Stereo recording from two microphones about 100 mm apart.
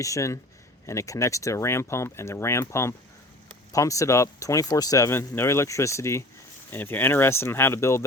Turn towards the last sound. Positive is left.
turn(degrees=25)  # may be behind; listen again after turning